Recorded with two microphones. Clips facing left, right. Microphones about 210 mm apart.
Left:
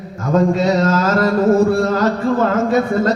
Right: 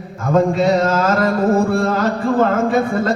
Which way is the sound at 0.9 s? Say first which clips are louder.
Left 1 dB; 55° right (ahead or behind).